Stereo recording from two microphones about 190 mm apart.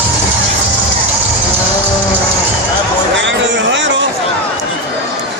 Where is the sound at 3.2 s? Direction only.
70° right (ahead or behind).